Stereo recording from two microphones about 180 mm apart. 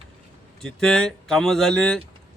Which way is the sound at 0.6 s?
5° left (ahead or behind).